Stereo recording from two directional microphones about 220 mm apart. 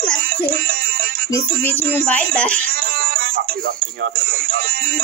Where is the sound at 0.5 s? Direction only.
40° right (ahead or behind).